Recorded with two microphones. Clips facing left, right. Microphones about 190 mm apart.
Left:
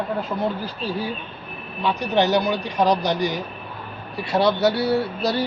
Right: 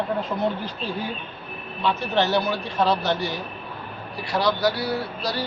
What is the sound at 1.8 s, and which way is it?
Speech, 15° left (ahead or behind).